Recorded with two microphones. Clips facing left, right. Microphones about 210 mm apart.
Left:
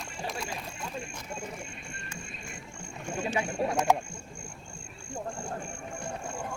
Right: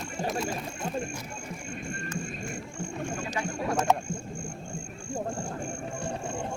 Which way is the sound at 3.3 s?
15° left (ahead or behind).